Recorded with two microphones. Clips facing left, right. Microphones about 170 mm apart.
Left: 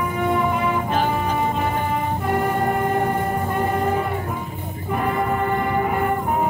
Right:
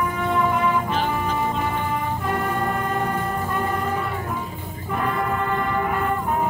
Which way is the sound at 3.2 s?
25° left (ahead or behind).